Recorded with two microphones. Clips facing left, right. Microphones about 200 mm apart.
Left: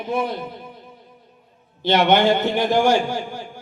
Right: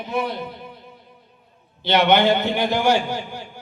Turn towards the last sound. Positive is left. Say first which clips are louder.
# left 1 dB
turn(degrees=50)  # may be behind; listen again after turning